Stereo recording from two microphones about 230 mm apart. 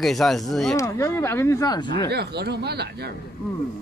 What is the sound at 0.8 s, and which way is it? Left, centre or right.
Speech, centre.